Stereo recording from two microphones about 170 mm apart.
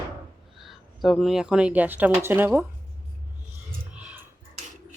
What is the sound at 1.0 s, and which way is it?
Speech, centre (ahead or behind).